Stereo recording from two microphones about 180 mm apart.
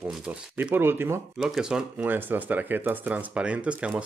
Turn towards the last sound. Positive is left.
turn(degrees=-5)  # may be behind; listen again after turning